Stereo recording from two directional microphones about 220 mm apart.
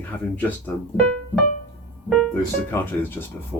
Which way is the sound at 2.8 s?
10° left (ahead or behind).